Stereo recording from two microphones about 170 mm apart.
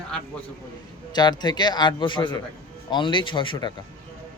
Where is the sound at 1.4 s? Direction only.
25° left (ahead or behind).